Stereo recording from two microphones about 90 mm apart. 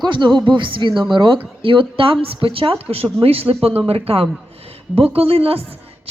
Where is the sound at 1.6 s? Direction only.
75° right (ahead or behind).